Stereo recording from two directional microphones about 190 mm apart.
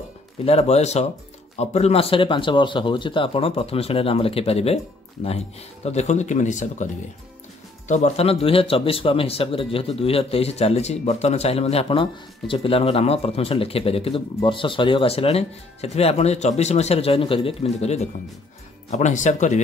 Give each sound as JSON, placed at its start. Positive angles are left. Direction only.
{"t": 0.5, "sound": "speech", "side_deg": 35}
{"t": 5.9, "sound": "speech", "side_deg": 35}
{"t": 7.9, "sound": "speech", "side_deg": 35}